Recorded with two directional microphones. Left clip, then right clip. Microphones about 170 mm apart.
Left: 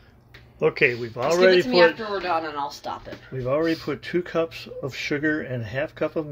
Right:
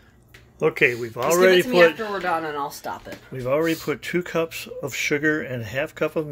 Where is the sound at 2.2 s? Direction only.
40° right (ahead or behind).